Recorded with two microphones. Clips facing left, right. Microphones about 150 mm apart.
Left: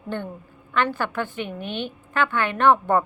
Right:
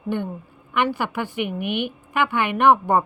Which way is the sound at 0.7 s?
15° right (ahead or behind).